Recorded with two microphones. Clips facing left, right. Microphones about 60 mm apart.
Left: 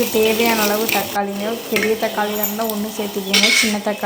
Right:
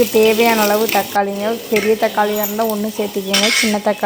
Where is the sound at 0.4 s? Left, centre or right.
Right.